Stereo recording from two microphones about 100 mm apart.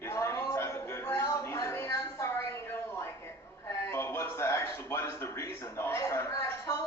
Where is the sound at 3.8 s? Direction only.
25° left (ahead or behind).